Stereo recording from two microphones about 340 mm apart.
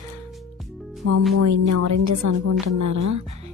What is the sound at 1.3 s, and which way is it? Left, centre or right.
A woman's voice, right.